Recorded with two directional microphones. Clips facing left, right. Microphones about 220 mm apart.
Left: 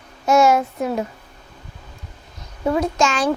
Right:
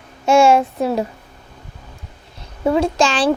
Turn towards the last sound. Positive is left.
turn(degrees=-30)  # may be behind; listen again after turning